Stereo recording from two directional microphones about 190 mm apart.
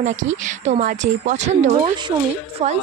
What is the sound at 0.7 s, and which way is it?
Speech, 40° right (ahead or behind).